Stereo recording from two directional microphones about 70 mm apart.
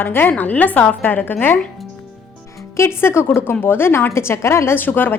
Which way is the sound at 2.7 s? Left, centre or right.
Left.